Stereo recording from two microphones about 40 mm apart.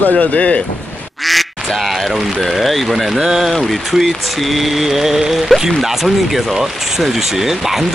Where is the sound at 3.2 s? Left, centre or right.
Centre.